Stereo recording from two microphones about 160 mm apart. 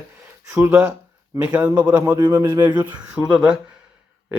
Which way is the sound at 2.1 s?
25° right (ahead or behind).